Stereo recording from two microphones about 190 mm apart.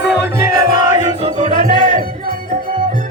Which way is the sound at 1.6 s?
45° right (ahead or behind).